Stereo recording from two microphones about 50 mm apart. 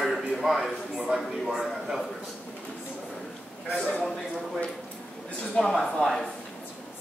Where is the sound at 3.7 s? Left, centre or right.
Centre.